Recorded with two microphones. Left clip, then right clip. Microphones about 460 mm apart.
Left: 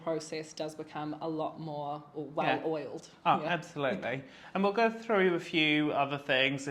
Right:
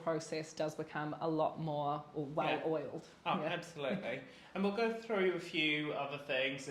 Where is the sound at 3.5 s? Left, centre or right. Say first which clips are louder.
Left 7 dB; left.